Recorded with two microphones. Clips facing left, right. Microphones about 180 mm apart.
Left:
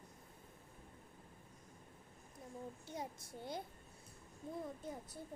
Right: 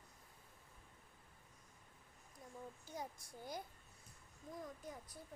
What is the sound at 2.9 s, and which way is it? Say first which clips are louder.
A child's voice: left 1 dB; 25° left (ahead or behind).